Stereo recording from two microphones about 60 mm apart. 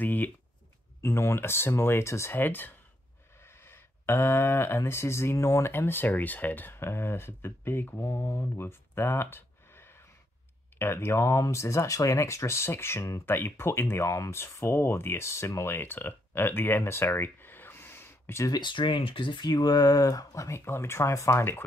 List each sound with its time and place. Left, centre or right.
0.0 s a sound: left
1.0 s speech: left
2.3 s speech: left
3.4 s speech: left
5.7 s speech: left
15.7 s speech: left
19.5 s speech: left
20.5 s speech: left